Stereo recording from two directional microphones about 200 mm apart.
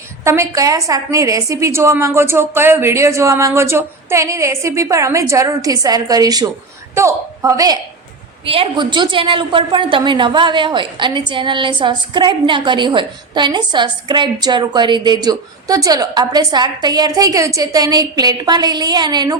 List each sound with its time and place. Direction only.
0.3 s a woman's voice: 15° right (ahead or behind)
8.4 s a woman's voice: 30° right (ahead or behind)